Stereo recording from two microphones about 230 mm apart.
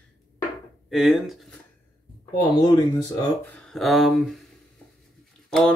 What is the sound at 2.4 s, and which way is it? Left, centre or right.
Speech, centre.